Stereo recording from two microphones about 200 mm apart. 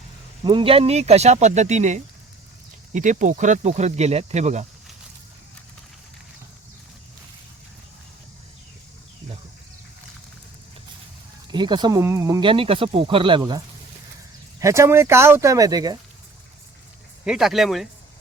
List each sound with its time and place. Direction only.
0.4 s speech: 25° right (ahead or behind)
11.5 s speech: 20° right (ahead or behind)
14.6 s speech: 15° right (ahead or behind)
17.2 s speech: centre (ahead or behind)